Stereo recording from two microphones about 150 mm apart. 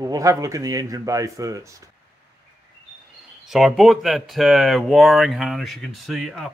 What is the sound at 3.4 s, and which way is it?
Speech, centre (ahead or behind).